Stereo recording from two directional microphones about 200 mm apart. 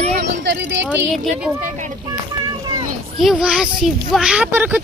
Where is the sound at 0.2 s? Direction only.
60° right (ahead or behind).